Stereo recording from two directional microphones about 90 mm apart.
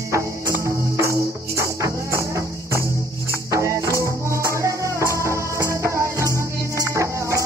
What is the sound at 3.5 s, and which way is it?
Music, 35° right (ahead or behind).